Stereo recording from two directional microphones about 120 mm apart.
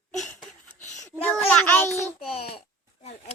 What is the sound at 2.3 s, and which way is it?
Speech, 55° left (ahead or behind).